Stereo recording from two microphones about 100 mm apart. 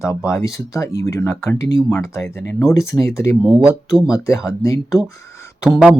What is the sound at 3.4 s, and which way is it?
Speech, 10° right (ahead or behind).